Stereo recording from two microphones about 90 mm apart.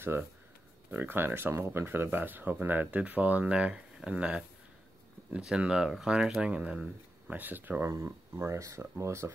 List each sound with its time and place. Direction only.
0.1 s speech: 30° right (ahead or behind)
7.9 s speech: 30° right (ahead or behind)